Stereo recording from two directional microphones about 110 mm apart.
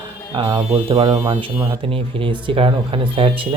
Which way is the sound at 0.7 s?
55° right (ahead or behind).